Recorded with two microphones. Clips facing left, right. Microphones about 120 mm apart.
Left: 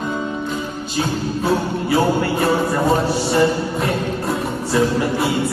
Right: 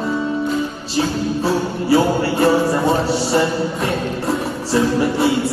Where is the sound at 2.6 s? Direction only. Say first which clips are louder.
Right 1 dB; 30° right (ahead or behind).